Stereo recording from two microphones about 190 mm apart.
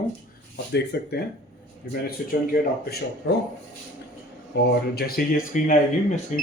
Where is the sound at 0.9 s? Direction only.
55° left (ahead or behind).